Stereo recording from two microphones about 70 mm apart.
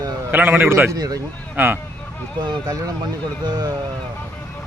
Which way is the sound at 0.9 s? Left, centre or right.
Right.